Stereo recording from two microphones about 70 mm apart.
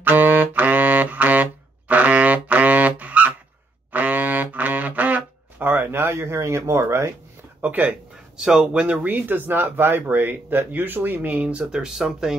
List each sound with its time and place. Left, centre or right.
0.0 s wind instrument: right
3.9 s a sound: right
7.6 s speech: right
8.4 s speech: centre